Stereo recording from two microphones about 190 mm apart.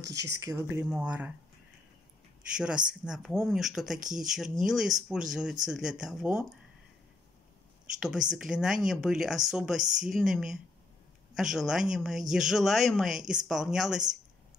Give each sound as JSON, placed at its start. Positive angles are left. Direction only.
{"t": 0.0, "sound": "speech", "side_deg": -15}
{"t": 2.5, "sound": "speech", "side_deg": -5}
{"t": 8.0, "sound": "speech", "side_deg": -5}